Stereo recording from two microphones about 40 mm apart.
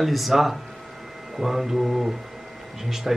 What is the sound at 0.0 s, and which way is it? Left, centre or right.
Speech, centre.